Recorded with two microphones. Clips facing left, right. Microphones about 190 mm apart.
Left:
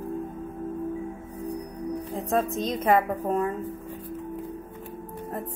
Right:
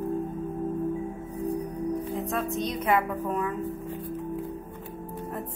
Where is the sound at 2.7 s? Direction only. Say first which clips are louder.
Left 3 dB; 45° left (ahead or behind).